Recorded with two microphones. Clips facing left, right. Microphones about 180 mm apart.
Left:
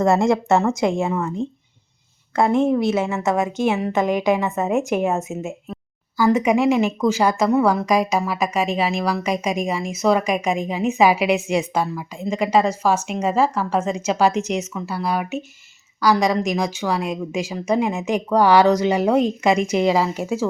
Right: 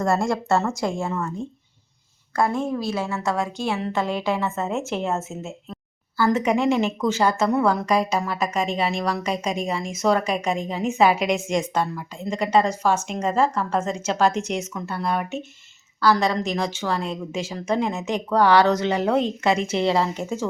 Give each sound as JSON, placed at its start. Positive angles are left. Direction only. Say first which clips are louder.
{"t": 0.0, "sound": "a woman's voice", "louder": "left 5 dB", "side_deg": 20}